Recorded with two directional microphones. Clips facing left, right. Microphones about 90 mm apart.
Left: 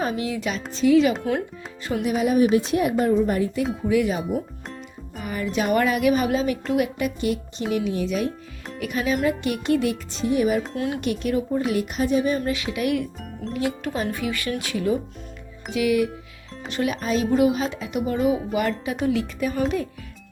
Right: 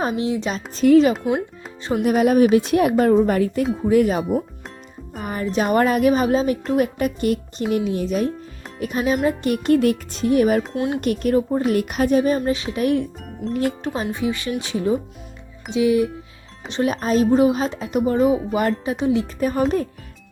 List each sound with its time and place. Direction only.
0.2 s speech: 30° right (ahead or behind)
0.7 s a woman's voice: 45° right (ahead or behind); by 2.9 s 60° right (ahead or behind)
3.2 s speech: 75° right (ahead or behind)
3.8 s speech: 45° right (ahead or behind)
5.2 s speech: 40° right (ahead or behind); by 10.6 s 55° right (ahead or behind)
10.8 s speech: 25° right (ahead or behind)
11.0 s speech: 45° right (ahead or behind)
12.4 s speech: 30° right (ahead or behind)
13.8 s speech: 30° right (ahead or behind)
16.9 s speech: 40° right (ahead or behind)
18.9 s speech: 25° right (ahead or behind)
19.4 s speech: 40° right (ahead or behind)